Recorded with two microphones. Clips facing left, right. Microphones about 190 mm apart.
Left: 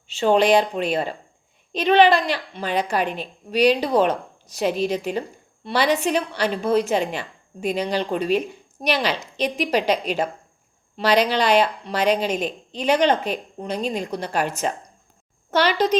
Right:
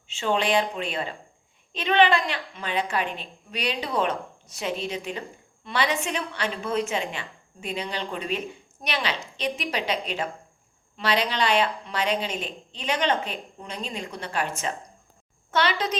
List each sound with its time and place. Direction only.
0.1 s speech: 40° left (ahead or behind)